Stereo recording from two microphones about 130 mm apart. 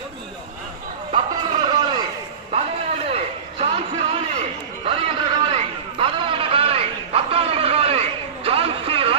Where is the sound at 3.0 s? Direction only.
50° right (ahead or behind).